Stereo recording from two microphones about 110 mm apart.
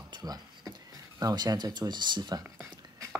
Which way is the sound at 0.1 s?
40° right (ahead or behind).